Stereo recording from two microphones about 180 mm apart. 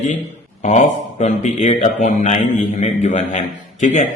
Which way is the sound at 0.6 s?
40° left (ahead or behind).